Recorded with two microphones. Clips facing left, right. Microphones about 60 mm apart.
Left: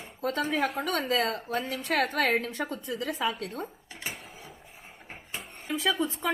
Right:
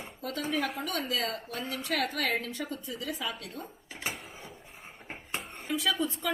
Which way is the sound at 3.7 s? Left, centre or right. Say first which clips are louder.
Right 1 dB; centre.